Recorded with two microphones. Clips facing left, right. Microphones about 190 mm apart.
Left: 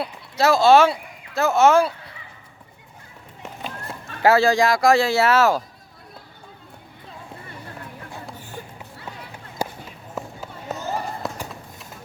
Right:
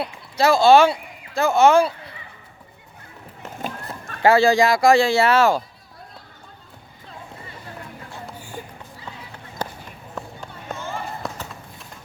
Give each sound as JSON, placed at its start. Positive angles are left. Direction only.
{"t": 0.0, "sound": "speech", "side_deg": 0}
{"t": 4.2, "sound": "speech", "side_deg": 0}
{"t": 8.4, "sound": "run", "side_deg": -15}
{"t": 9.6, "sound": "run", "side_deg": 10}
{"t": 10.8, "sound": "a sound", "side_deg": 40}
{"t": 11.2, "sound": "run", "side_deg": 0}